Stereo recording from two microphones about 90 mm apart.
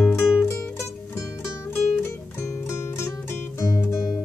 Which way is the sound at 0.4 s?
30° left (ahead or behind).